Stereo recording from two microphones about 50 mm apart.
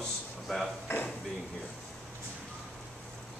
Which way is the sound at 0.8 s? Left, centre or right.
Left.